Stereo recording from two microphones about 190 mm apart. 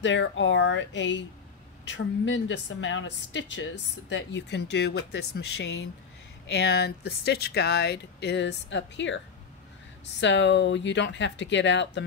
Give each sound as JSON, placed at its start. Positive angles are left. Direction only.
{"t": 0.0, "sound": "a woman's voice", "side_deg": 70}
{"t": 10.2, "sound": "a woman's voice", "side_deg": 70}